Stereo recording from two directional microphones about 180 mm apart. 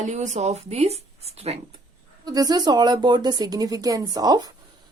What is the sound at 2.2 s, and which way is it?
Speech, 20° right (ahead or behind).